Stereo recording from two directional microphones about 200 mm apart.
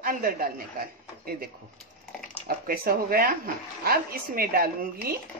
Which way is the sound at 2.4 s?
45° right (ahead or behind).